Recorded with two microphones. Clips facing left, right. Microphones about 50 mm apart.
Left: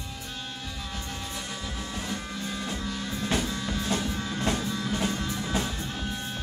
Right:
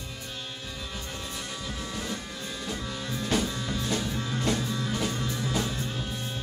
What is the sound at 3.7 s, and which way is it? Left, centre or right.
Music, left.